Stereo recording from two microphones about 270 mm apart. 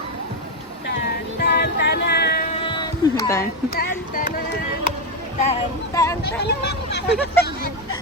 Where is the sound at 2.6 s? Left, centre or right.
Centre.